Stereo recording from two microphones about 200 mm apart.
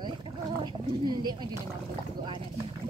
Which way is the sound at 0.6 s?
20° right (ahead or behind).